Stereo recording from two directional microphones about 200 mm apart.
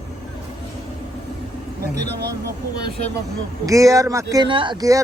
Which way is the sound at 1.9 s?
55° right (ahead or behind).